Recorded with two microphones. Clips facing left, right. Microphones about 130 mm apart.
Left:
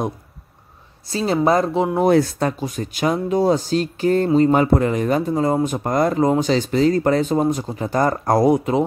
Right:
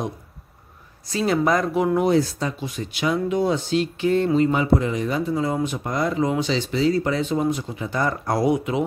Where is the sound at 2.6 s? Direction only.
45° left (ahead or behind).